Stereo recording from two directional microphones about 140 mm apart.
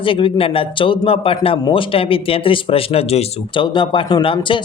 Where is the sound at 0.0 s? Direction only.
40° left (ahead or behind).